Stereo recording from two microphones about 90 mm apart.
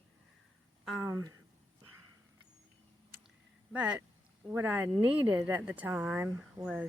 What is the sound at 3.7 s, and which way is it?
Speech, 10° right (ahead or behind).